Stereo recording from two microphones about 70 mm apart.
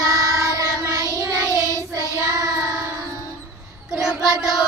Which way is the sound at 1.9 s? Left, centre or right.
Right.